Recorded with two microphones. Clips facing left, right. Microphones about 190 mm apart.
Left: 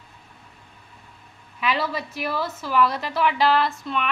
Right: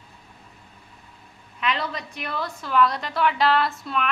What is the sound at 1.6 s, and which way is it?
A woman's voice, 5° left (ahead or behind).